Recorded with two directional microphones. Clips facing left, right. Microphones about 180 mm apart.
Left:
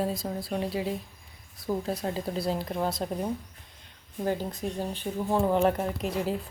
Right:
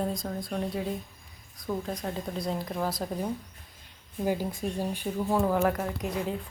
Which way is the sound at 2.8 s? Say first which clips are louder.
Left 1 dB; 25° left (ahead or behind).